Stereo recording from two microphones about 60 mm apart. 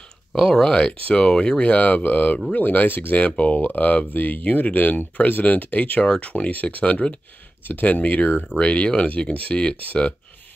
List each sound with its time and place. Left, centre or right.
0.4 s speech: centre
1.6 s speech: left